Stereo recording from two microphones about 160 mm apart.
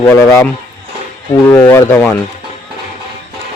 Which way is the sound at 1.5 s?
25° left (ahead or behind).